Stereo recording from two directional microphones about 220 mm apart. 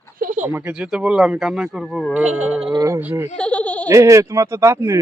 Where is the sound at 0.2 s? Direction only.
35° right (ahead or behind).